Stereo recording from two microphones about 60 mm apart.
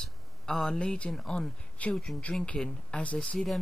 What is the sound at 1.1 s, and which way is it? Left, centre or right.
Speech, centre.